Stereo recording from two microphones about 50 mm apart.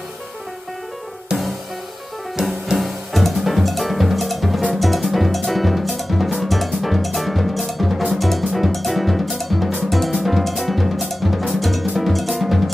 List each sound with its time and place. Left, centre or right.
1.3 s music: centre
2.4 s music: centre
9.8 s drum: centre
11.9 s drum kit: centre